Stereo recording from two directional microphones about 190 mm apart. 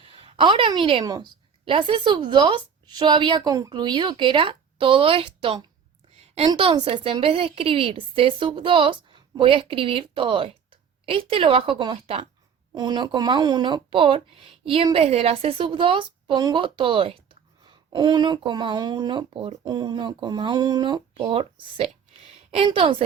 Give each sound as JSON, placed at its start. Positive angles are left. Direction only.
{"t": 0.0, "sound": "a woman's voice", "side_deg": -30}